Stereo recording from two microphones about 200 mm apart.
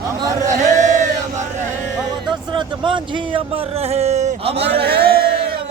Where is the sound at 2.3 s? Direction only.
25° right (ahead or behind).